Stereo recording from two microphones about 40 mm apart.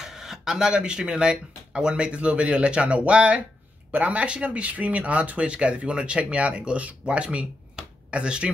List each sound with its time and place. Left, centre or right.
0.0 s speech: centre; by 8.5 s right